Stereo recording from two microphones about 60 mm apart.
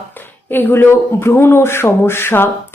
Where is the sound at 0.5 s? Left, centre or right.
Left.